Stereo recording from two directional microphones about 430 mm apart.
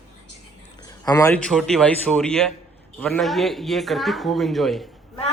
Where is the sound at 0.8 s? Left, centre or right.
Centre.